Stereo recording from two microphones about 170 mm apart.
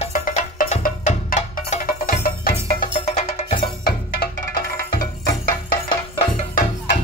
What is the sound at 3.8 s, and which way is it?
Music, 60° left (ahead or behind).